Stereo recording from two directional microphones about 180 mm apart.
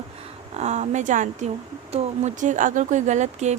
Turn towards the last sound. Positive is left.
turn(degrees=-40)  # may be behind; listen again after turning